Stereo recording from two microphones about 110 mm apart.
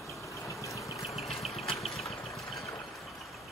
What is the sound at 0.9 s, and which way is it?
Vehicle, centre (ahead or behind).